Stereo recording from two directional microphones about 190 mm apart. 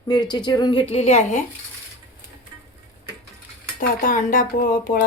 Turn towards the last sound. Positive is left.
turn(degrees=45)  # may be behind; listen again after turning